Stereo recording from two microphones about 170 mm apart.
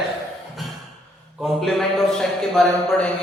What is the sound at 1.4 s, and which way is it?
A man's voice, centre (ahead or behind).